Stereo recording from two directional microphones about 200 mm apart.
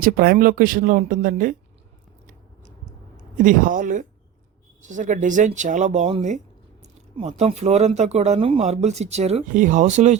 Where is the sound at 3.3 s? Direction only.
40° right (ahead or behind).